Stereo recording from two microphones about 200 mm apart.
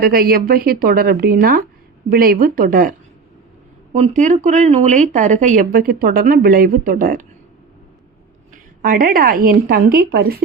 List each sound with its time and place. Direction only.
0.0 s speech: 50° right (ahead or behind)
3.9 s speech: 35° right (ahead or behind)
8.8 s speech: 45° right (ahead or behind)